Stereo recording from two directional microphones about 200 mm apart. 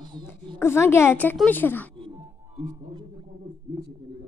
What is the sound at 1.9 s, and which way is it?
Speech, 25° right (ahead or behind).